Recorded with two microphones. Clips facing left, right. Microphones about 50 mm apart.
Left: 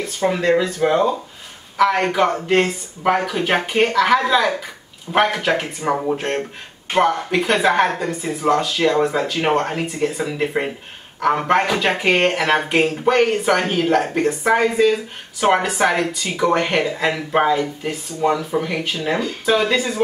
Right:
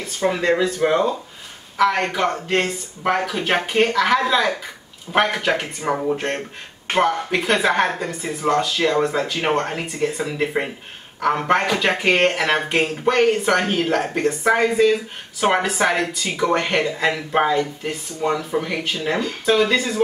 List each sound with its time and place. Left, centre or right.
0.0 s speech: centre